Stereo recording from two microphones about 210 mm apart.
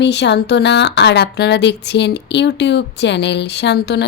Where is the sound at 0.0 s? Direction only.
55° left (ahead or behind).